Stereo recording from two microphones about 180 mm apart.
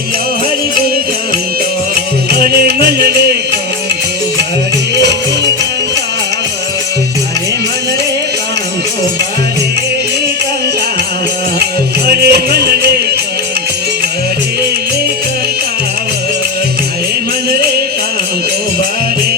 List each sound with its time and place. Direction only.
3.1 s music: 65° right (ahead or behind)
12.0 s music: 60° right (ahead or behind)